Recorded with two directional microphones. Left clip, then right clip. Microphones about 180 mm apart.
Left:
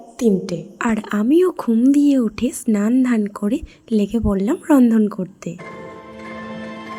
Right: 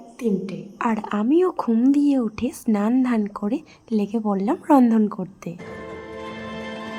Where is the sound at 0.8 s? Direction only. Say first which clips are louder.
Left 1 dB; 15° left (ahead or behind).